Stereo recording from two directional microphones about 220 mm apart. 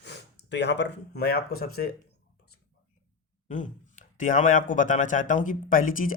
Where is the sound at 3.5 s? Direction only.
35° left (ahead or behind).